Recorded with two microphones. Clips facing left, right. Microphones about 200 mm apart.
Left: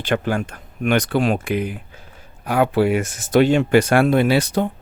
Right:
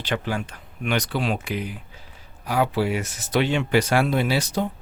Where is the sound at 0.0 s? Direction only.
50° left (ahead or behind).